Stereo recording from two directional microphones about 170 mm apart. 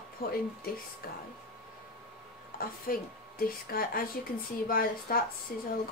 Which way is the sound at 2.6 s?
60° left (ahead or behind).